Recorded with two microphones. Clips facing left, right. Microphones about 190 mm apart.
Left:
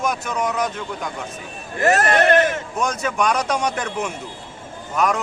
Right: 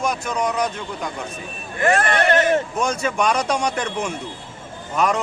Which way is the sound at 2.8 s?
Centre (ahead or behind).